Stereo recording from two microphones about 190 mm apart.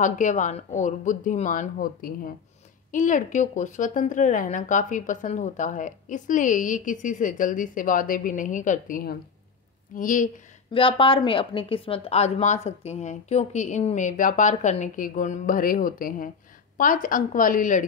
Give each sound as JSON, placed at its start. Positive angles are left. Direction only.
{"t": 0.0, "sound": "a woman's voice", "side_deg": 40}
{"t": 10.7, "sound": "a woman's voice", "side_deg": 30}